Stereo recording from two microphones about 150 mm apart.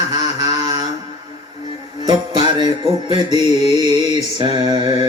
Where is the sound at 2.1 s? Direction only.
30° right (ahead or behind).